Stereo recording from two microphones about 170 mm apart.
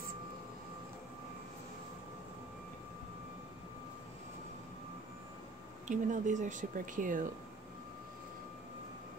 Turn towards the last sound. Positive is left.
turn(degrees=-50)  # may be behind; listen again after turning